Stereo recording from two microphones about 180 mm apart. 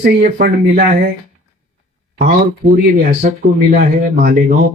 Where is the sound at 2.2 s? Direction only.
55° right (ahead or behind).